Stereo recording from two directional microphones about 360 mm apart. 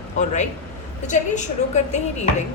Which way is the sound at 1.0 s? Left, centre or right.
Centre.